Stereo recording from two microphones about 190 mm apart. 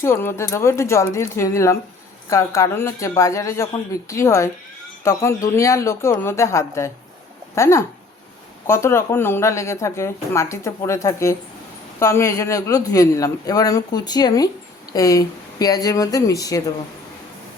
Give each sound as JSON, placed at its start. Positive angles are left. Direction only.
{"t": 0.0, "sound": "speech", "side_deg": 10}
{"t": 5.5, "sound": "speech", "side_deg": 15}